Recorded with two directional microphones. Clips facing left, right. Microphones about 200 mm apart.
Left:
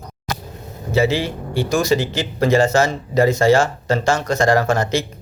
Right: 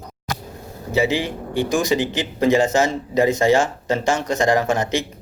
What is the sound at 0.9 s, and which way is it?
Speech, 15° right (ahead or behind).